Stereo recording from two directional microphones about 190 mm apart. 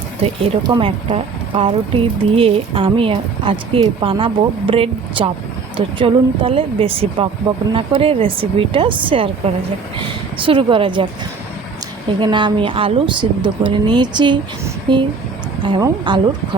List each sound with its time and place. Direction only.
0.2 s speech: 25° right (ahead or behind)
12.2 s speech: 25° right (ahead or behind)